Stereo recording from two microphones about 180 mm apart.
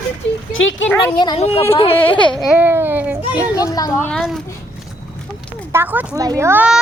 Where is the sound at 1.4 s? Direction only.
35° left (ahead or behind).